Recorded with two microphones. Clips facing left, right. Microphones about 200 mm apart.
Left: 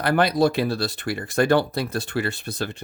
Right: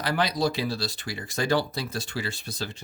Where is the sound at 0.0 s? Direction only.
55° left (ahead or behind).